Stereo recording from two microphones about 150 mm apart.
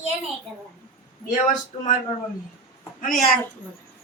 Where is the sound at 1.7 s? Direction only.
45° left (ahead or behind).